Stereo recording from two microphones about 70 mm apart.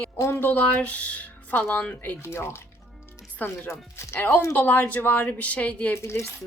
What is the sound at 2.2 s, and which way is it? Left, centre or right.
Speech, left.